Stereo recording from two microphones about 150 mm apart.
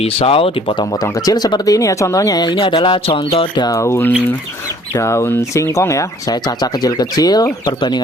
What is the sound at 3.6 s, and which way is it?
Speech, 20° left (ahead or behind).